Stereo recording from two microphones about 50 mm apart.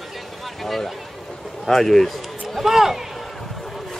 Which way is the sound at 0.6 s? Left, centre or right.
Centre.